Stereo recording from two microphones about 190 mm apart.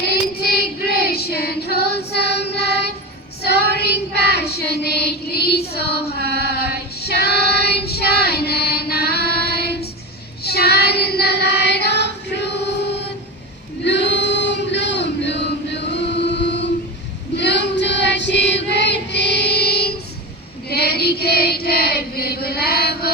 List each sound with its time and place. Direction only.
0.0 s child singing: 55° left (ahead or behind)
13.8 s male singing: 65° left (ahead or behind)
17.3 s child singing: 65° left (ahead or behind)
20.7 s chant: 55° left (ahead or behind)